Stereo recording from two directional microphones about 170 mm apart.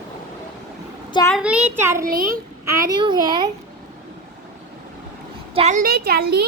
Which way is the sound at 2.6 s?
20° right (ahead or behind).